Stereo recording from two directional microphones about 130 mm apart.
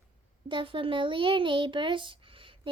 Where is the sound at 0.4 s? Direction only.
40° right (ahead or behind).